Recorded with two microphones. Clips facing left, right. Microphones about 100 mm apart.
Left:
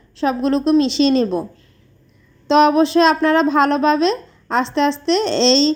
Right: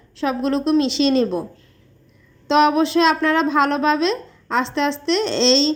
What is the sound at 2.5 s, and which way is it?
Speech, 35° left (ahead or behind).